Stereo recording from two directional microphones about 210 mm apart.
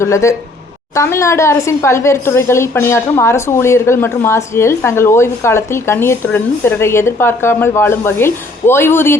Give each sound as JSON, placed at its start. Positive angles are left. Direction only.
{"t": 0.0, "sound": "a woman's voice", "side_deg": 15}